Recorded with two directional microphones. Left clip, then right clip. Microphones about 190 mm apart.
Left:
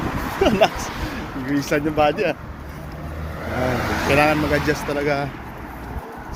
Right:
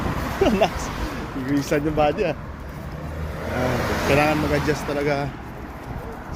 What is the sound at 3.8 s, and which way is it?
Vehicle, 65° right (ahead or behind).